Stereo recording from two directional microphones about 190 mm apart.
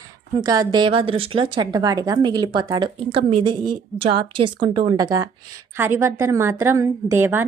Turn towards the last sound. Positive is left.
turn(degrees=-10)  # may be behind; listen again after turning